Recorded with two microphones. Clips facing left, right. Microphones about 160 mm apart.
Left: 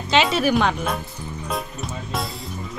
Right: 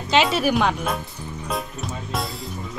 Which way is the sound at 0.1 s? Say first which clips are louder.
Left 1 dB; 5° right (ahead or behind).